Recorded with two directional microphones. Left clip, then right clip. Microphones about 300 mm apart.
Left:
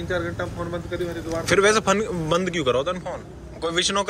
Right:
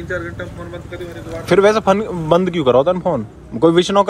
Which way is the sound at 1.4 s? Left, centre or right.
Centre.